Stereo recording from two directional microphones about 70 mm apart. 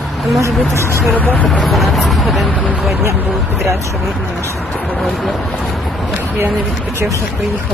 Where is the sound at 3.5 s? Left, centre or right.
Centre.